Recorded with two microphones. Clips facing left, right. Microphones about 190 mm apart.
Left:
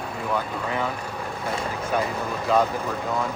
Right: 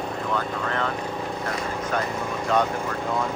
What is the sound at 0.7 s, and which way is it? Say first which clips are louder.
Speech: left 1 dB; 10° left (ahead or behind).